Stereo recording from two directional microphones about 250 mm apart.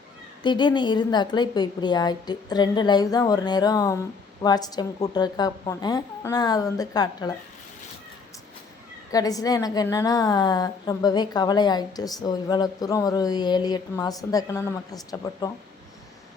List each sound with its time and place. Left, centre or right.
0.4 s a woman's voice: centre
9.1 s a woman's voice: centre